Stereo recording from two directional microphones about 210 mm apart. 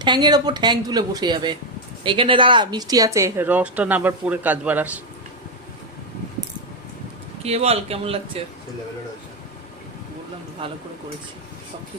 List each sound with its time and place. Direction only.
0.0 s a woman's voice: 20° right (ahead or behind)
7.4 s a woman's voice: 30° right (ahead or behind)
10.6 s a woman's voice: 25° right (ahead or behind)